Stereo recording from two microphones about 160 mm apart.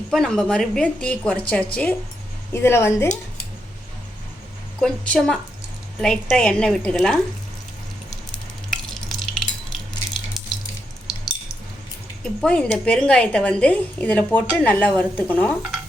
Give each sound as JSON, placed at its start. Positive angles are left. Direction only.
{"t": 0.1, "sound": "a woman's voice", "side_deg": 5}
{"t": 4.8, "sound": "a woman's voice", "side_deg": 5}
{"t": 8.7, "sound": "stir", "side_deg": 0}
{"t": 12.2, "sound": "a woman's voice", "side_deg": 5}